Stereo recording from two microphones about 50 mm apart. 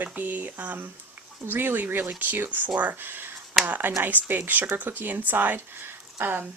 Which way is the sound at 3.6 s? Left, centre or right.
Right.